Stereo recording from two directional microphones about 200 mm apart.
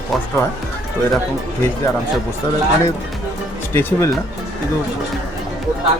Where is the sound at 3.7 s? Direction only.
10° left (ahead or behind).